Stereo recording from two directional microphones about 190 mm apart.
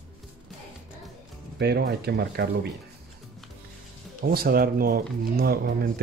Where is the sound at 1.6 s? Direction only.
60° right (ahead or behind).